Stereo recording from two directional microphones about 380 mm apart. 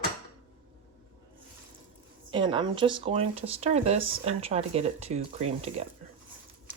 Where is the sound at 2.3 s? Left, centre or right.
Centre.